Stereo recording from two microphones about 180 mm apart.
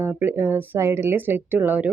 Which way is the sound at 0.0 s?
10° right (ahead or behind).